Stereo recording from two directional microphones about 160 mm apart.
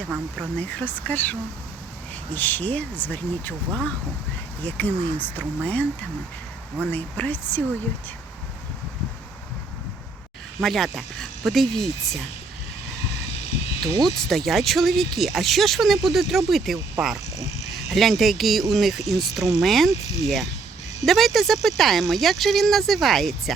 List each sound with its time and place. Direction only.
0.5 s speech: 10° left (ahead or behind)
6.9 s speech: 10° left (ahead or behind)
10.6 s speech: centre (ahead or behind)
13.8 s speech: 25° right (ahead or behind)
14.3 s speech: centre (ahead or behind)
17.8 s speech: centre (ahead or behind)